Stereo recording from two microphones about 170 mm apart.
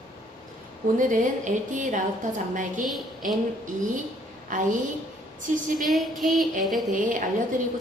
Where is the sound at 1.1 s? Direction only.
45° right (ahead or behind).